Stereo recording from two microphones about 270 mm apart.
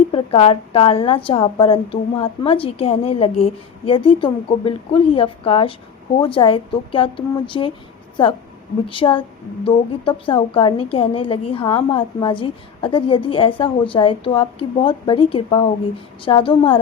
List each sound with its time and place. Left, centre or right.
0.1 s a woman's voice: left